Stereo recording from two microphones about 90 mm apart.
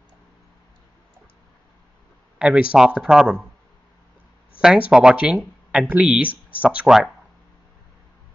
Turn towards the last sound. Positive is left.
turn(degrees=-5)  # may be behind; listen again after turning